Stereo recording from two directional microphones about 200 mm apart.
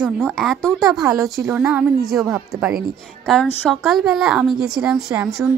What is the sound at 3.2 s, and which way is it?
A woman's voice, 5° left (ahead or behind).